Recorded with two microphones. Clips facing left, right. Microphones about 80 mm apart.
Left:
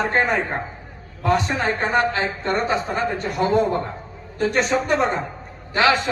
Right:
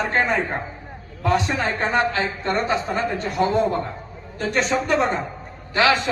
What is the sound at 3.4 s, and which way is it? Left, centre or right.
Speech, left.